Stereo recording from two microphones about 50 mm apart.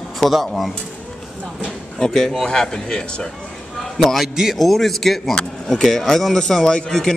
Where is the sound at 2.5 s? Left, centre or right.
Centre.